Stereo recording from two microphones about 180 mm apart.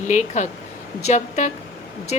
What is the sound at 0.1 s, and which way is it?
A woman's voice, 40° left (ahead or behind).